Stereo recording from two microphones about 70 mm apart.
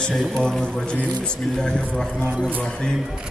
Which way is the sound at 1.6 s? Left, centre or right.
Centre.